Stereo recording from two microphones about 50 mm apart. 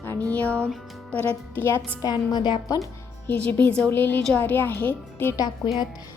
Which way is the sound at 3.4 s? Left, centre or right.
Left.